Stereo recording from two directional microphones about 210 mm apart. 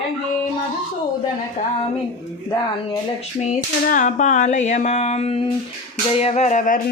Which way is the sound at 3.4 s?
40° left (ahead or behind).